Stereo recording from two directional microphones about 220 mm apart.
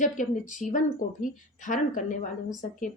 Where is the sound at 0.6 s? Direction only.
35° left (ahead or behind).